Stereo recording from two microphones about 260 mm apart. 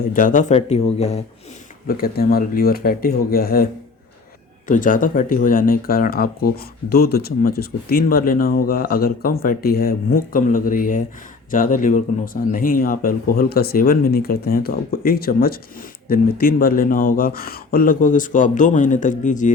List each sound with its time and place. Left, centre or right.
0.0 s speech: left
1.9 s speech: left
4.7 s speech: left